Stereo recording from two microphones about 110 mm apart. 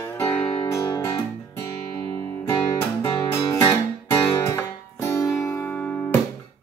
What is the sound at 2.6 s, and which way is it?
Music, 35° left (ahead or behind).